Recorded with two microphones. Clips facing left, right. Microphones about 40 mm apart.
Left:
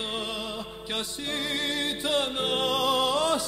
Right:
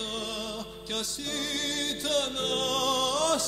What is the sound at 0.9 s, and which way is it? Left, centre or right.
Music, left.